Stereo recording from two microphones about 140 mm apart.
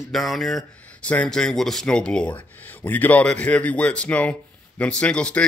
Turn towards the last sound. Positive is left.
turn(degrees=10)  # may be behind; listen again after turning